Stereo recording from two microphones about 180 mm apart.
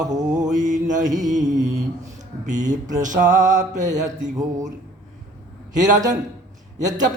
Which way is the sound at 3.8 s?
20° right (ahead or behind).